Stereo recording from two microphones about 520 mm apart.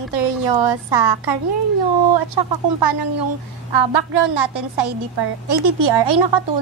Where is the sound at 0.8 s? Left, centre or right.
Right.